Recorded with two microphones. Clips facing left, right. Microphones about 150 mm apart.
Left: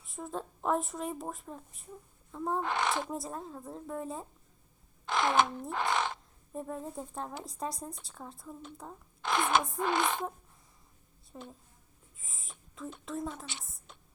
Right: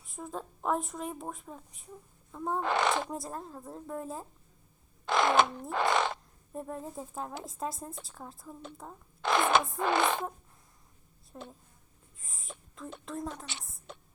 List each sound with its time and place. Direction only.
0.0 s speech: centre (ahead or behind)
2.6 s speech: 80° right
3.1 s speech: centre (ahead or behind)
5.0 s speech: 90° right
6.5 s speech: centre (ahead or behind)
9.2 s speech: 85° right
11.3 s speech: centre (ahead or behind)
12.1 s a sound: centre (ahead or behind)
13.1 s speech: centre (ahead or behind)
13.6 s a sound: centre (ahead or behind)